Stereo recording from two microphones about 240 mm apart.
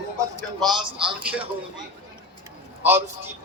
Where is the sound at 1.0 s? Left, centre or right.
Right.